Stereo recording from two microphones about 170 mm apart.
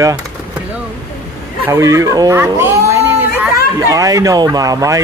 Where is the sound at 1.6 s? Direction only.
20° right (ahead or behind).